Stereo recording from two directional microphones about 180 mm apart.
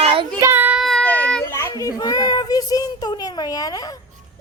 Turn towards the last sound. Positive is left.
turn(degrees=20)  # may be behind; listen again after turning